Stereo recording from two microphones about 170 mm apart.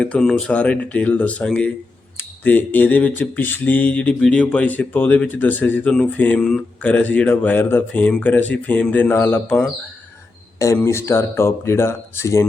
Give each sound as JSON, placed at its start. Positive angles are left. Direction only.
{"t": 0.0, "sound": "speech", "side_deg": 5}